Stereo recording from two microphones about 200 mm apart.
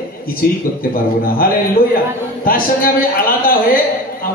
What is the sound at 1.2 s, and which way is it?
A man's voice, 45° left (ahead or behind).